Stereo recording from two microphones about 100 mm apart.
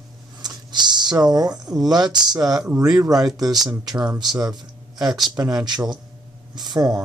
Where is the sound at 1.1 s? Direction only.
45° right (ahead or behind).